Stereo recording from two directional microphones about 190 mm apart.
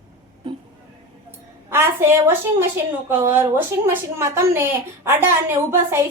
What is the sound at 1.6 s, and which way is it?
A woman's voice, 10° right (ahead or behind).